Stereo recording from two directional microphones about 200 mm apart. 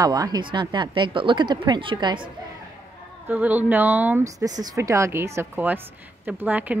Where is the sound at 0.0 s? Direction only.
20° right (ahead or behind).